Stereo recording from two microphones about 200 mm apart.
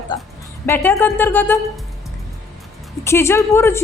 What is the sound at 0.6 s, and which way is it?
Speech, 10° left (ahead or behind).